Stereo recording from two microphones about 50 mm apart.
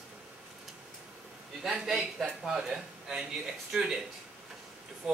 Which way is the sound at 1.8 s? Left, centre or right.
Centre.